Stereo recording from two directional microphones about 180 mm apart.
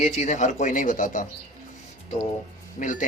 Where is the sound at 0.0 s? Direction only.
40° left (ahead or behind).